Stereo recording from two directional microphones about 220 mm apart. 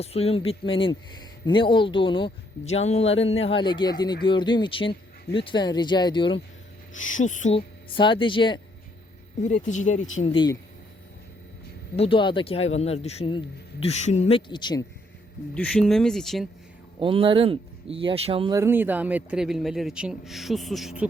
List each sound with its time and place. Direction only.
0.0 s speech: 25° left (ahead or behind)
6.9 s speech: 35° left (ahead or behind)
9.4 s speech: 30° left (ahead or behind)
11.9 s speech: 25° left (ahead or behind)
15.5 s a man's voice: 5° left (ahead or behind)
17.0 s speech: 25° right (ahead or behind)
18.5 s a man's voice: 10° right (ahead or behind)